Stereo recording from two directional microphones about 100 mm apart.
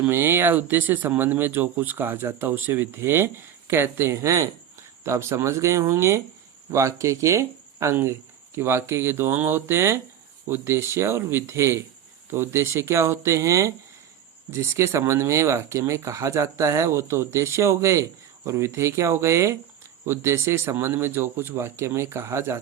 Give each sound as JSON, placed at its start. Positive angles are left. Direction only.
{"t": 0.0, "sound": "speech", "side_deg": -20}